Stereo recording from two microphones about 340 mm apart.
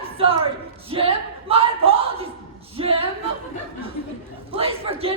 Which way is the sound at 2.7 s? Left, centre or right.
Centre.